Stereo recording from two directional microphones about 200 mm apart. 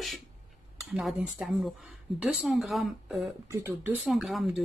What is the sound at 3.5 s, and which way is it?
Speech, 15° right (ahead or behind).